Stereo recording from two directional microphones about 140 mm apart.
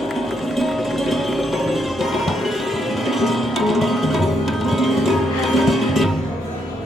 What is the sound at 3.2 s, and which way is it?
Music, centre (ahead or behind).